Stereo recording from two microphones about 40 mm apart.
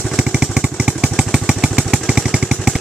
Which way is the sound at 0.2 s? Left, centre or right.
Right.